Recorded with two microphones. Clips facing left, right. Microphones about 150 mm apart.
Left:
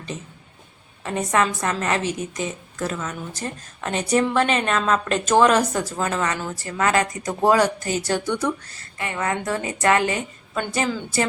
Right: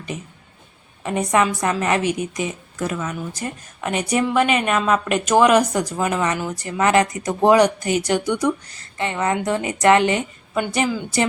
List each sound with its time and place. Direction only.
0.1 s a woman's voice: 10° right (ahead or behind)